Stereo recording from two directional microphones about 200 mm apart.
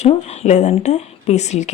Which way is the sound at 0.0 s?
35° left (ahead or behind).